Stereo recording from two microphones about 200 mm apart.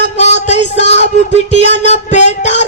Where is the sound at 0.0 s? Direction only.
35° left (ahead or behind).